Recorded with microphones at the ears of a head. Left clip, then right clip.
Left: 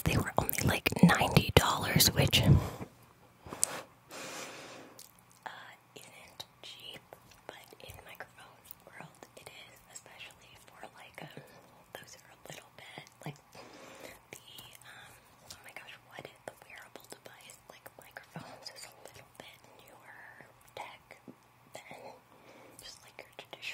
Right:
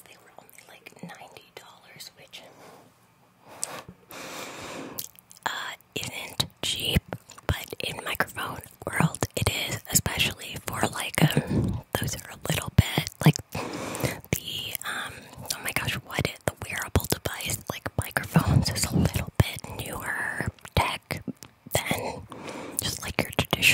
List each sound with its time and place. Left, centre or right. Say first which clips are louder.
0.0 s whispering: left 18 dB; left
4.3 s whispering: right 10 dB; right